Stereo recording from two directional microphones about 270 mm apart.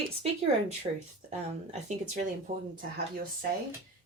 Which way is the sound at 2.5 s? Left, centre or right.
Right.